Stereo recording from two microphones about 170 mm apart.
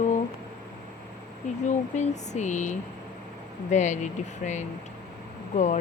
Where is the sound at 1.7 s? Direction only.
45° left (ahead or behind).